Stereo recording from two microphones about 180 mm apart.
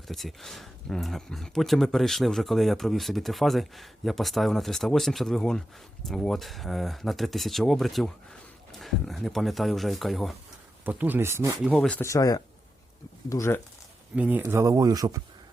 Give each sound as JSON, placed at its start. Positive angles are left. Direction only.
{"t": 0.1, "sound": "speech", "side_deg": 0}
{"t": 11.6, "sound": "speech", "side_deg": 0}
{"t": 14.2, "sound": "speech", "side_deg": -10}